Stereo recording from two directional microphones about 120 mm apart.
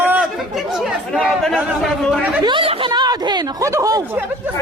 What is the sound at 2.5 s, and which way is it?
Speech, 45° right (ahead or behind).